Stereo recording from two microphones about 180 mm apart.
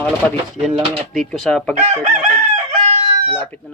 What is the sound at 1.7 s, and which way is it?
Chicken, 35° right (ahead or behind).